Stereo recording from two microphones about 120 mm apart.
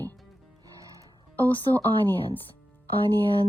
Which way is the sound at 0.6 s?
30° right (ahead or behind).